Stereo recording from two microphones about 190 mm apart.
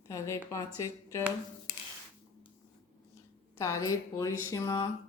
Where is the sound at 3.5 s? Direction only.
15° left (ahead or behind).